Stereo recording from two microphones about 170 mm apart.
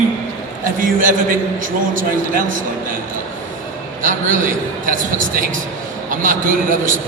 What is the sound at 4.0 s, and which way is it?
A man's voice, 50° right (ahead or behind).